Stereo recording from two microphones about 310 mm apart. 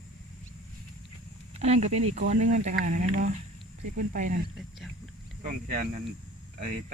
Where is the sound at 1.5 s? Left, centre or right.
Right.